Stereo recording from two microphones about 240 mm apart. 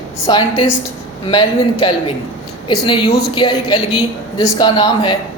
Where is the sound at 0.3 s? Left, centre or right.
Centre.